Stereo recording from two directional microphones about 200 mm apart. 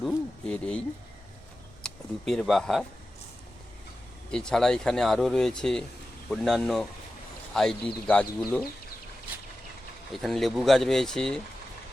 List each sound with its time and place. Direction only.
0.0 s speech: 5° left (ahead or behind)
1.8 s speech: centre (ahead or behind)
4.3 s speech: 5° left (ahead or behind)
10.1 s speech: centre (ahead or behind)